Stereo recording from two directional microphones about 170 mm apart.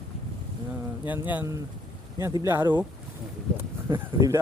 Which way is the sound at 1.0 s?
10° right (ahead or behind).